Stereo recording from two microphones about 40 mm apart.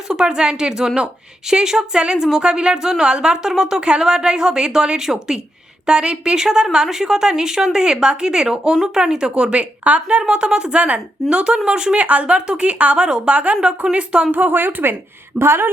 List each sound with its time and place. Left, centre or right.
0.1 s a woman's voice: right
3.8 s a woman's voice: right
11.9 s speech: right
13.1 s a woman's voice: centre
13.3 s speech: right
14.3 s a woman's voice: right
15.4 s speech: right